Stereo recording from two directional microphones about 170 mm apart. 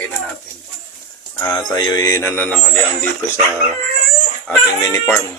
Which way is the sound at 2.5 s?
5° left (ahead or behind).